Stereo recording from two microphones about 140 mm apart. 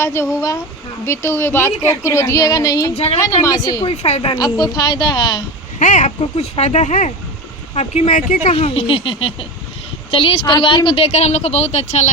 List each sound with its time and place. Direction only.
0.0 s a woman's voice: 20° left (ahead or behind)
2.9 s a woman's voice: 45° left (ahead or behind)
3.4 s a woman's voice: 25° left (ahead or behind)
4.0 s a woman's voice: 45° left (ahead or behind)
4.4 s a woman's voice: 30° left (ahead or behind)
5.8 s speech: 65° left (ahead or behind)
6.3 s a woman's voice: 50° left (ahead or behind)